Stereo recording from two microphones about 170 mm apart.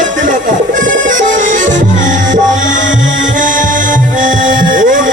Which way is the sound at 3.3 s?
50° right (ahead or behind).